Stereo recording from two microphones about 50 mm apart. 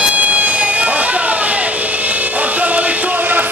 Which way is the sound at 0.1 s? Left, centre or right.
Right.